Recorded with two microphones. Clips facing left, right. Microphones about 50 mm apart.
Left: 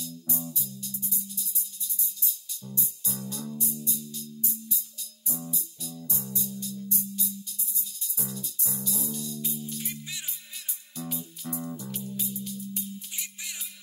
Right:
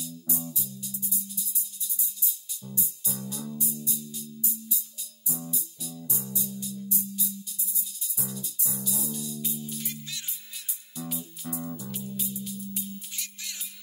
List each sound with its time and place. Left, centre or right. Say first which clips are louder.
0.0 s music: even; centre
4.1 s music: even; centre
9.8 s music: even; centre
11.0 s music: even; centre
13.1 s music: left 1 dB; centre